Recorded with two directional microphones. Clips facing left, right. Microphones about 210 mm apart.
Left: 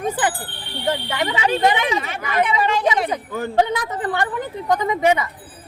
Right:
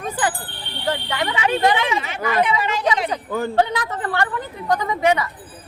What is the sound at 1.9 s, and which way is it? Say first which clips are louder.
Speech: right 1 dB; 45° left (ahead or behind).